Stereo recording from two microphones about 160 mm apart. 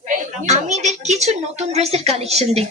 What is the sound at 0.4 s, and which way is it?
A woman's voice, 45° right (ahead or behind).